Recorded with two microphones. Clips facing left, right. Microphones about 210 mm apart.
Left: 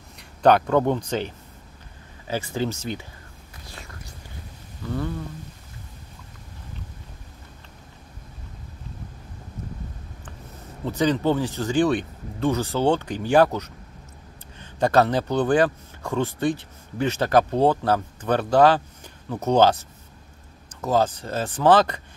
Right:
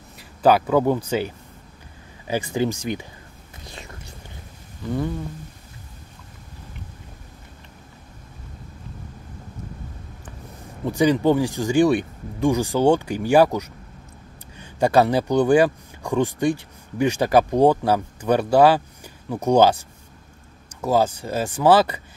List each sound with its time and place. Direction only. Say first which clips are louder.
0.2 s speech: even; 5° right (ahead or behind)
3.6 s whispering: right 3 dB; 20° right (ahead or behind)
4.8 s speech: right 3 dB; 15° right (ahead or behind)
10.9 s speech: right 4 dB; 10° right (ahead or behind)
20.8 s speech: right 2 dB; 10° right (ahead or behind)